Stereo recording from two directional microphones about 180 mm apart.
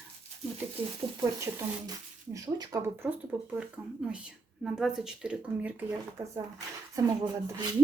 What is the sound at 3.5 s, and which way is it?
Speech, 5° right (ahead or behind).